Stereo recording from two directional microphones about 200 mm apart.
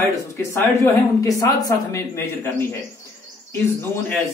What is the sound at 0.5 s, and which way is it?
Speech, 15° left (ahead or behind).